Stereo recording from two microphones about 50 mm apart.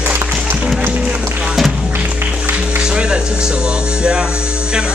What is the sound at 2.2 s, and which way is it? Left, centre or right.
Music, right.